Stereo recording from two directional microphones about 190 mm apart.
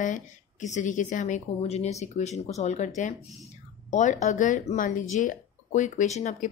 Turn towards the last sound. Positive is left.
turn(degrees=35)  # may be behind; listen again after turning